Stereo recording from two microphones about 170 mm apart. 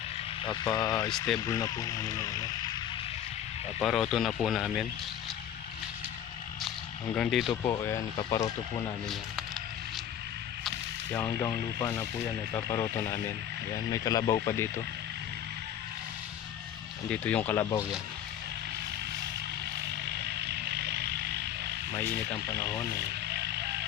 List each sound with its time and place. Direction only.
0.4 s speech: 25° left (ahead or behind)
3.8 s speech: centre (ahead or behind)
7.2 s speech: centre (ahead or behind)
7.5 s speech: 20° left (ahead or behind)
9.0 s a sound: centre (ahead or behind)
11.1 s speech: 10° left (ahead or behind)
12.9 s speech: 15° left (ahead or behind)
17.1 s speech: 10° left (ahead or behind)
20.2 s vehicle: 75° right (ahead or behind)
21.9 s speech: 15° left (ahead or behind)
23.3 s music: 75° right (ahead or behind)